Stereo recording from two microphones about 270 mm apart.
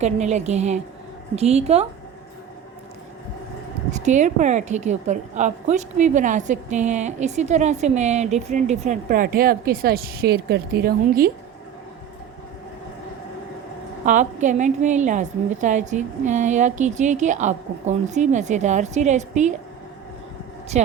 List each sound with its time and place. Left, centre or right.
0.0 s a woman's voice: right
3.9 s a woman's voice: right
14.0 s a woman's voice: right
20.7 s a woman's voice: right